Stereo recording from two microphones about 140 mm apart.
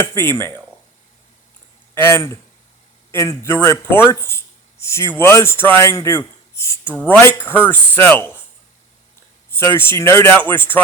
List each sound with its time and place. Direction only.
0.0 s speech: 15° left (ahead or behind)
2.1 s speech: 20° left (ahead or behind)
9.5 s speech: 15° left (ahead or behind)